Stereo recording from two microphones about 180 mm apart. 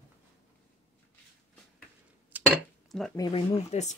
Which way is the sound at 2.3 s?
10° right (ahead or behind).